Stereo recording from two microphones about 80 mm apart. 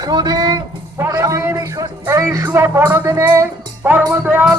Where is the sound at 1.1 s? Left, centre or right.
Right.